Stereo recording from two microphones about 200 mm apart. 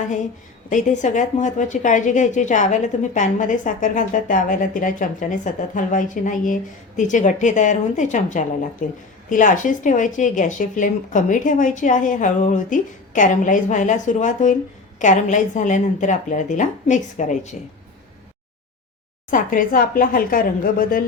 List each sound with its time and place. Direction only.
0.7 s a woman's voice: 40° left (ahead or behind)
19.3 s speech: 40° left (ahead or behind)